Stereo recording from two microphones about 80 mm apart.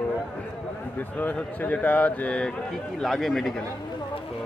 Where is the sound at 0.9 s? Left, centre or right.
Left; by 3.6 s centre.